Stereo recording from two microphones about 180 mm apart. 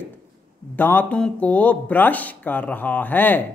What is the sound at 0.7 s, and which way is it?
Speech, 10° left (ahead or behind).